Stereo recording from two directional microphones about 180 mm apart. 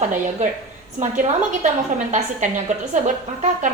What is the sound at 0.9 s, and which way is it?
A woman's voice, 45° right (ahead or behind).